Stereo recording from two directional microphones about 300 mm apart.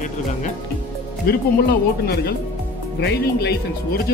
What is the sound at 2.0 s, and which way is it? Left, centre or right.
Speech, left.